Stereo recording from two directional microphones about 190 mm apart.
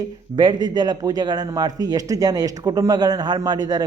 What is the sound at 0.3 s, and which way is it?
Speech, 25° right (ahead or behind).